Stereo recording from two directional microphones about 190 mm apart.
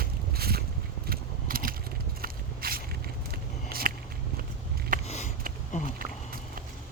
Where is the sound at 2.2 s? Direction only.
50° right (ahead or behind).